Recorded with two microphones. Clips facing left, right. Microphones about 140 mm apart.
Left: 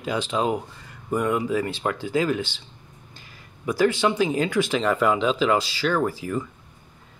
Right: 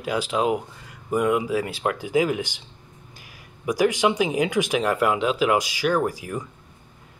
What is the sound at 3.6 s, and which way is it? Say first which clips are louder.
Speech: right 1 dB; 15° right (ahead or behind).